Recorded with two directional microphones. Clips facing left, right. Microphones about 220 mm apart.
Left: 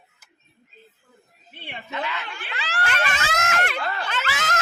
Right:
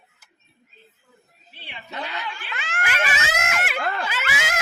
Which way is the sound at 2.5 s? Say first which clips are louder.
Left 1 dB; 35° left (ahead or behind).